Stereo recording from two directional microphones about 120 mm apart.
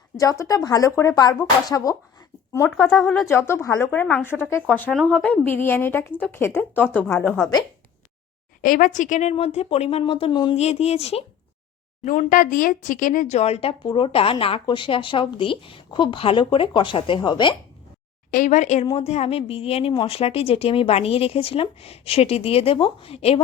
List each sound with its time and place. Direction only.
0.2 s speech: 30° left (ahead or behind)
2.6 s speech: centre (ahead or behind)
3.2 s a woman's voice: 20° left (ahead or behind)
8.7 s a woman's voice: 90° left
9.3 s a woman's voice: 60° left (ahead or behind)
10.6 s a woman's voice: 65° left (ahead or behind)
12.0 s speech: 90° left; by 13.7 s 55° left (ahead or behind)
13.8 s a woman's voice: 45° left (ahead or behind)
18.4 s a woman's voice: 90° left
18.9 s a woman's voice: 60° left (ahead or behind)